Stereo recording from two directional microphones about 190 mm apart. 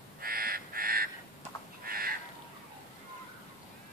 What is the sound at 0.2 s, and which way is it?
Crow, 50° right (ahead or behind).